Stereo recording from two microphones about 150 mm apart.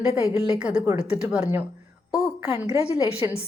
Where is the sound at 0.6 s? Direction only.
5° right (ahead or behind).